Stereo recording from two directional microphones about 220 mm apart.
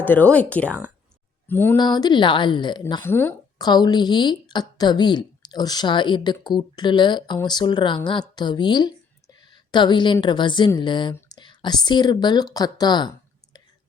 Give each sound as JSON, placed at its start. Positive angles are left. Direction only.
{"t": 0.0, "sound": "a woman's voice", "side_deg": 10}